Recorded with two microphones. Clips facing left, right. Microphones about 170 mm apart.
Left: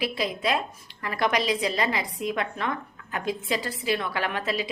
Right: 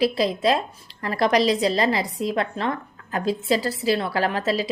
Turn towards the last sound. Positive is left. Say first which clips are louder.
# right 5 dB
turn(degrees=-35)  # may be behind; listen again after turning